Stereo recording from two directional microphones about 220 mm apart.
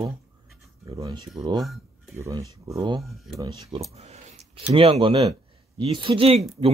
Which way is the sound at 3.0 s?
Centre (ahead or behind).